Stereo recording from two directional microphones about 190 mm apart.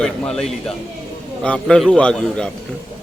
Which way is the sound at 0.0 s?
5° left (ahead or behind).